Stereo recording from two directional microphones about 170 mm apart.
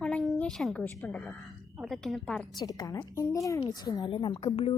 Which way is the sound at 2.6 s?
20° left (ahead or behind).